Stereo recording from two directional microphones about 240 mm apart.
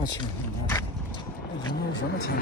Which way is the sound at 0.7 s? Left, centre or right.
Centre.